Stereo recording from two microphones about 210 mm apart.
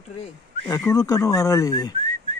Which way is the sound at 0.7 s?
15° left (ahead or behind).